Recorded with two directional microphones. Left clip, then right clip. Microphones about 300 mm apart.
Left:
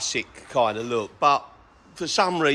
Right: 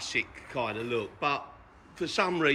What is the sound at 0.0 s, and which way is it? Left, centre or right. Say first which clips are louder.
A man's voice: left 3 dB; centre.